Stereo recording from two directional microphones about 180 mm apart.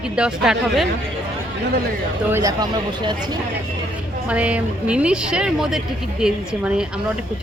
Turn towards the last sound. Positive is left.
turn(degrees=-5)  # may be behind; listen again after turning